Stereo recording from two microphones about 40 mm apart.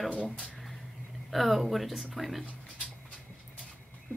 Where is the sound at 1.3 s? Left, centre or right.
Centre.